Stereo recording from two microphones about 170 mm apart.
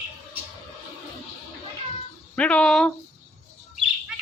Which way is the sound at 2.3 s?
5° left (ahead or behind).